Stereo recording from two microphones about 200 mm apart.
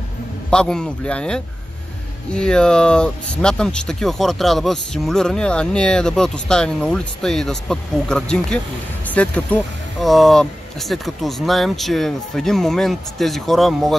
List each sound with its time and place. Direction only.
0.5 s speech: 5° left (ahead or behind)